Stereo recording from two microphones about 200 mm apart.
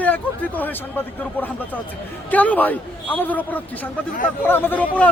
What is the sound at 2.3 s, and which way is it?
Speech, 10° left (ahead or behind).